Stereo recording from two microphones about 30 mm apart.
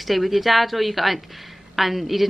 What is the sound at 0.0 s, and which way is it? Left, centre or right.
A woman's voice, centre.